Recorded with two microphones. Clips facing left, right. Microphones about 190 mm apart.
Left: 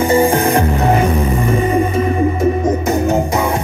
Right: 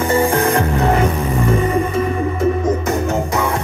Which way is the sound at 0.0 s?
20° left (ahead or behind).